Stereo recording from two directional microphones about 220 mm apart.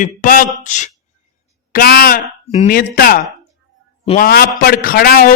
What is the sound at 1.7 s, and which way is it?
A man's voice, 45° left (ahead or behind).